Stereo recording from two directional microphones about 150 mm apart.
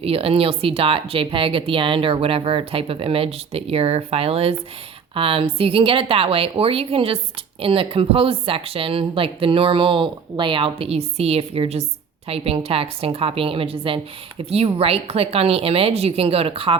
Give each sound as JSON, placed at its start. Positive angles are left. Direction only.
{"t": 0.0, "sound": "speech", "side_deg": -40}